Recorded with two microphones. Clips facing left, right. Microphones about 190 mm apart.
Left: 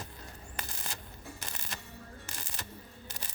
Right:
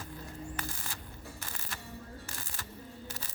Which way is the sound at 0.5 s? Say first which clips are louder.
Right 2 dB; 20° left (ahead or behind).